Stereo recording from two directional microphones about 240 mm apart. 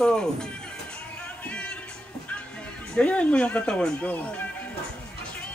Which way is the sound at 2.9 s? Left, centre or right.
Centre.